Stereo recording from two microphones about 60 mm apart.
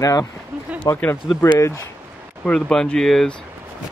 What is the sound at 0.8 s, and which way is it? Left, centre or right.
Speech, left.